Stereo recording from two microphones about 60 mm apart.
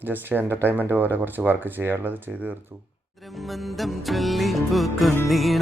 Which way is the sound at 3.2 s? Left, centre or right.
Centre.